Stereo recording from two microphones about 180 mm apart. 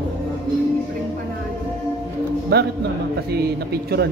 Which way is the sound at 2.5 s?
65° right (ahead or behind).